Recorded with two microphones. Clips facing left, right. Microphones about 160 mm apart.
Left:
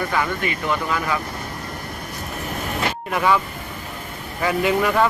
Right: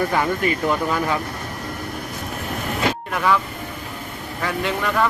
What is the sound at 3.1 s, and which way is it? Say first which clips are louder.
Speech: left 4 dB; 10° left (ahead or behind).